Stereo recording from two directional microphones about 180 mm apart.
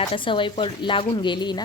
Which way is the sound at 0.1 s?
30° left (ahead or behind).